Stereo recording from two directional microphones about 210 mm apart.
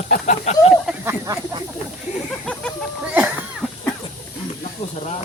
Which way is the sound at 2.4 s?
5° left (ahead or behind).